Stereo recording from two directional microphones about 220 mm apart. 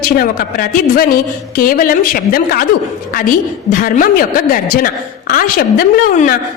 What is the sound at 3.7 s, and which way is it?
A woman's voice, 40° left (ahead or behind).